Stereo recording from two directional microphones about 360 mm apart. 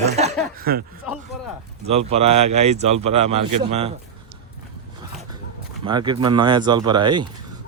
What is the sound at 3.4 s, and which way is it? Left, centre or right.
Speech, right.